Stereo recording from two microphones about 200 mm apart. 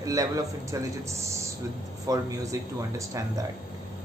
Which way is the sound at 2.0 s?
15° right (ahead or behind).